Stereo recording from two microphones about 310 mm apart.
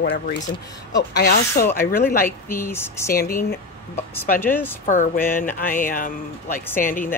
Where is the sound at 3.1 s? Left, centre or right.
Left.